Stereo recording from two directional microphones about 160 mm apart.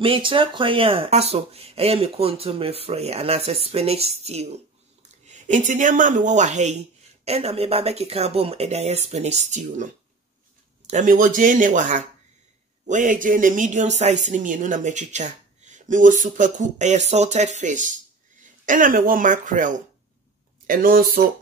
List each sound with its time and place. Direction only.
0.0 s speech: 35° right (ahead or behind)
10.9 s speech: 50° right (ahead or behind)